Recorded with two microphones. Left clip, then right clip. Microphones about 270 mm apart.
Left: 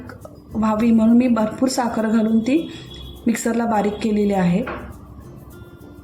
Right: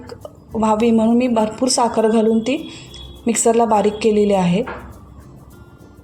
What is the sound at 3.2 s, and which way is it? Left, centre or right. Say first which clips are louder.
A woman's voice: right 7 dB; right.